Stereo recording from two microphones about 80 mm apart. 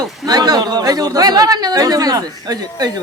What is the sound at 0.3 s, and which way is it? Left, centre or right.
Speech, right.